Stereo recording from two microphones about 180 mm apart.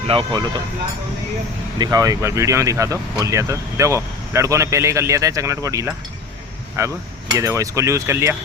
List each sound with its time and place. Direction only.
0.1 s speech: 25° right (ahead or behind)
1.8 s speech: 20° right (ahead or behind)